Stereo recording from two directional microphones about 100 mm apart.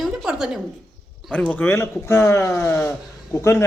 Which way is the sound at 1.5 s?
20° left (ahead or behind).